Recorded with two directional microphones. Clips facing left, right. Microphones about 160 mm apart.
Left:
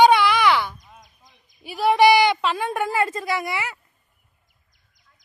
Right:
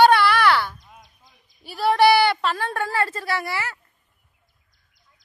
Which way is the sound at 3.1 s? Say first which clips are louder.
Left 1 dB; centre (ahead or behind).